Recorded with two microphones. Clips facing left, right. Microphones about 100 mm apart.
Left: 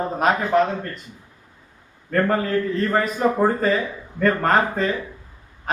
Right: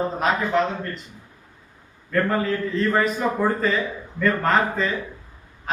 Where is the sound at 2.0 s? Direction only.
45° left (ahead or behind).